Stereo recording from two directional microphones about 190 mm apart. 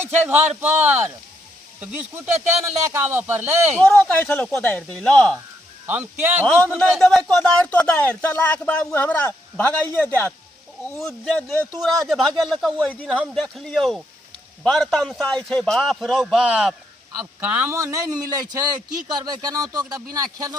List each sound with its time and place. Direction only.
0.0 s speech: 10° right (ahead or behind)
3.8 s speech: 10° left (ahead or behind)
5.8 s speech: 10° right (ahead or behind)
6.7 s a man's voice: centre (ahead or behind); by 20.6 s 20° right (ahead or behind)